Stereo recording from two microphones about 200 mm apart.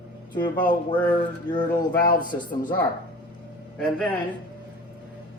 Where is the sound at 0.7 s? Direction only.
25° left (ahead or behind).